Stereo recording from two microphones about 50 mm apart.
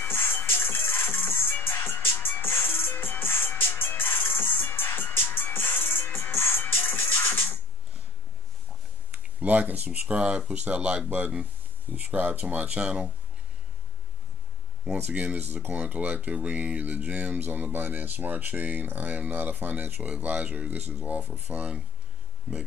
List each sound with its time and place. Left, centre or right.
0.0 s music: left
9.1 s speech: right
14.9 s speech: right
15.7 s speech: right